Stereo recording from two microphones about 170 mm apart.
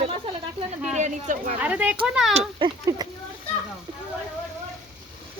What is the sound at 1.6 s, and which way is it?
Speech, 10° right (ahead or behind).